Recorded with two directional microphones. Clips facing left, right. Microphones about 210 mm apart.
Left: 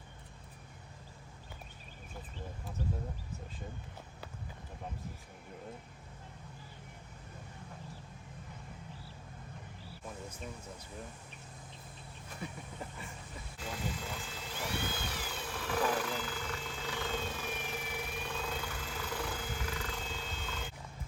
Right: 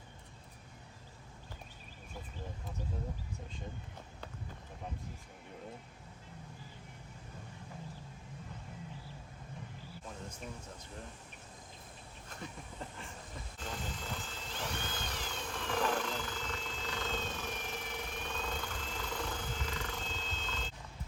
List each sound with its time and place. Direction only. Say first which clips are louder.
12.4 s speech: left 2 dB; 5° left (ahead or behind)
13.6 s vehicle: left 3 dB; 10° left (ahead or behind)